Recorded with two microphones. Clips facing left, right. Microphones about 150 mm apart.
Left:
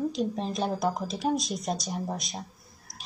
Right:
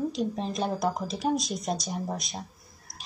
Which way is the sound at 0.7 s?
Centre (ahead or behind).